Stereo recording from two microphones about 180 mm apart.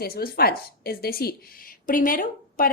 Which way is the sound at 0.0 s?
60° left (ahead or behind).